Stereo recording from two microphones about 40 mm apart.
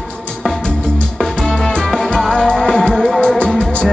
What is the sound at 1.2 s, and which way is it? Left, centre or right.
Music, centre.